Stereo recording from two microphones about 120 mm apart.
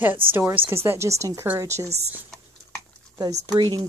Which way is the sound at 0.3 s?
20° right (ahead or behind).